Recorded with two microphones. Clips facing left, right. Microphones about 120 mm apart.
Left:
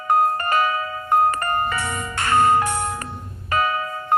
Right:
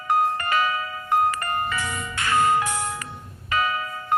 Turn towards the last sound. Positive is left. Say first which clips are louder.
# left 3 dB
turn(degrees=40)  # may be behind; listen again after turning